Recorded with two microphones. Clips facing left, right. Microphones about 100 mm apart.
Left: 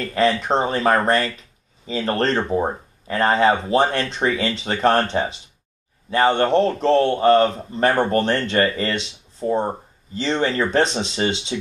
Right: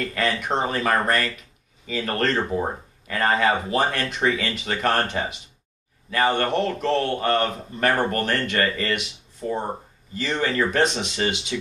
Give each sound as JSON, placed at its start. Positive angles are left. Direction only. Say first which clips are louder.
{"t": 0.0, "sound": "a man's voice", "louder": "left 6 dB", "side_deg": 30}